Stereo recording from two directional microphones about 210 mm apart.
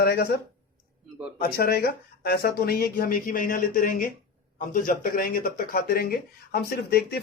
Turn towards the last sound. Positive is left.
turn(degrees=50)  # may be behind; listen again after turning